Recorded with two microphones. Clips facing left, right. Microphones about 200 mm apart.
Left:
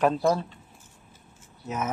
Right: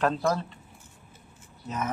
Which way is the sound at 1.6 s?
10° left (ahead or behind).